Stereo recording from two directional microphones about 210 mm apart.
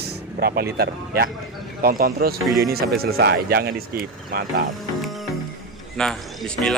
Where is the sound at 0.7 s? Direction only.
45° right (ahead or behind).